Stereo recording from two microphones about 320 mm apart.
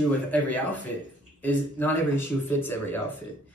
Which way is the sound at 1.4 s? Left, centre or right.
Centre.